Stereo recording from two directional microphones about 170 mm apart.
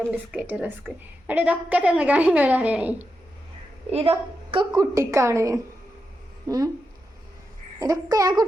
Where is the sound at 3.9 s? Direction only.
35° right (ahead or behind).